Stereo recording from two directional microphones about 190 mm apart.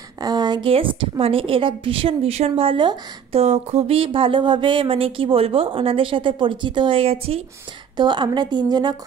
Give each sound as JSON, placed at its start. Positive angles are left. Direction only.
{"t": 0.2, "sound": "a woman's voice", "side_deg": -20}